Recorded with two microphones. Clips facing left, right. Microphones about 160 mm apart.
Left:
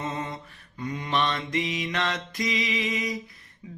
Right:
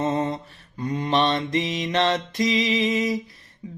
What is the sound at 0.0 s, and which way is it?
Mantra, 35° right (ahead or behind).